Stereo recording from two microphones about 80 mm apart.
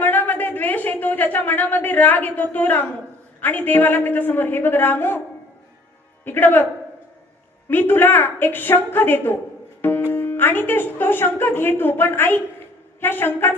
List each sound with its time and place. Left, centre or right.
0.0 s a sound: left
3.4 s speech: left
6.2 s speech: left
7.7 s speech: left